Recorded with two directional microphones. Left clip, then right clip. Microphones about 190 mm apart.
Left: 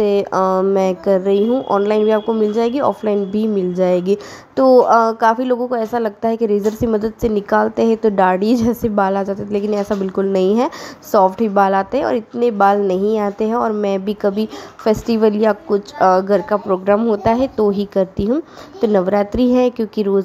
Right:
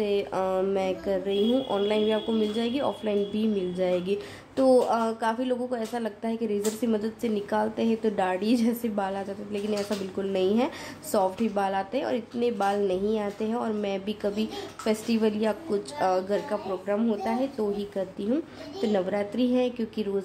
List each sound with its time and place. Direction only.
0.0 s speech: 30° left (ahead or behind)
18.3 s speech: 25° left (ahead or behind)